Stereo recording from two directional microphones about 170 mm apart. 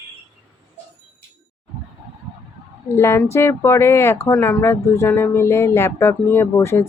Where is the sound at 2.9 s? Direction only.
15° left (ahead or behind).